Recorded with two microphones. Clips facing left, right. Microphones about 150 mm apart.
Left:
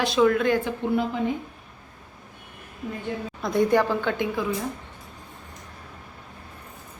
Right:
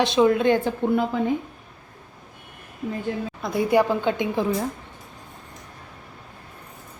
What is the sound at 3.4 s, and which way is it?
Speech, 5° right (ahead or behind).